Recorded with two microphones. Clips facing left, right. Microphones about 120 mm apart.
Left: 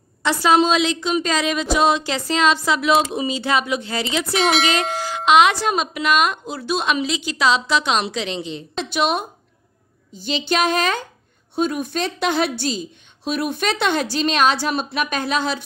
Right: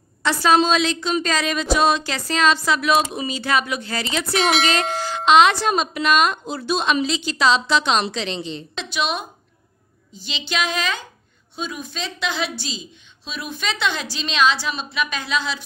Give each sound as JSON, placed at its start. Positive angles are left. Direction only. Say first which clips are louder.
{"t": 0.2, "sound": "a woman's voice", "louder": "left 1 dB", "side_deg": 20}
{"t": 4.3, "sound": "a woman's voice", "louder": "even", "side_deg": 0}
{"t": 8.8, "sound": "a woman's voice", "louder": "left 4 dB", "side_deg": 50}
{"t": 10.2, "sound": "a woman's voice", "louder": "left 6 dB", "side_deg": 45}